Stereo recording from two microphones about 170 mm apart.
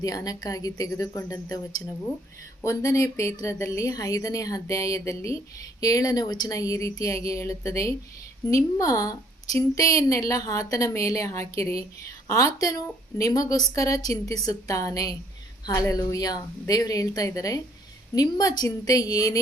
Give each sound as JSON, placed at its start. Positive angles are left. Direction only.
{"t": 0.0, "sound": "a woman's voice", "side_deg": 20}
{"t": 2.6, "sound": "a woman's voice", "side_deg": 15}